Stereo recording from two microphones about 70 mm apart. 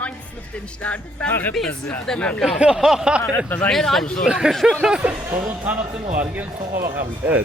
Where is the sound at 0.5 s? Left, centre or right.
Centre.